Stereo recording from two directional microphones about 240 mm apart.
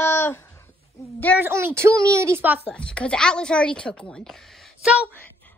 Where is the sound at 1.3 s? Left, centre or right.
Centre.